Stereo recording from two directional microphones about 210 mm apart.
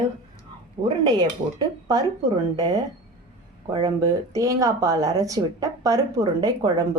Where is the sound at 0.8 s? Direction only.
20° right (ahead or behind).